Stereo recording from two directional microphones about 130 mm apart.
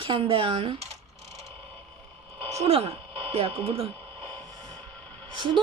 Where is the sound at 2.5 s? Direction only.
55° right (ahead or behind).